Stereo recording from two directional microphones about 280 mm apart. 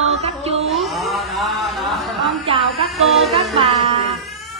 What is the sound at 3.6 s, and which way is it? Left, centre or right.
Music, right.